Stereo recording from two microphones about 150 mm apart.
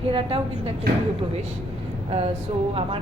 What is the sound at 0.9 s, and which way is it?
Speech, 80° right.